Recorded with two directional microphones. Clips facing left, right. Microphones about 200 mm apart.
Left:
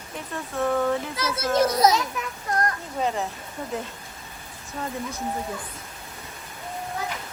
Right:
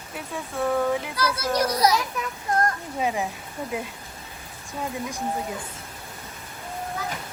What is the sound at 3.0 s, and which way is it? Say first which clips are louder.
Speech: even; 10° right (ahead or behind).